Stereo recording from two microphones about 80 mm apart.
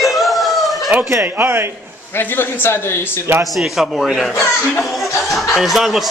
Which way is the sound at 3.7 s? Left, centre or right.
Centre.